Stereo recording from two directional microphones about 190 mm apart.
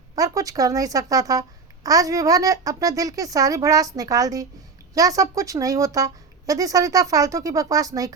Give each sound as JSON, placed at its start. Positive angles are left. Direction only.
{"t": 0.2, "sound": "a woman's voice", "side_deg": -20}